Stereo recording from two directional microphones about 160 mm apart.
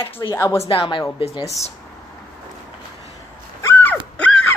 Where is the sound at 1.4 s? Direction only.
20° left (ahead or behind).